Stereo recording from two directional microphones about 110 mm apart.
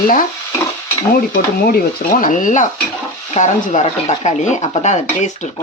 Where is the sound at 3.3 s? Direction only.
80° left.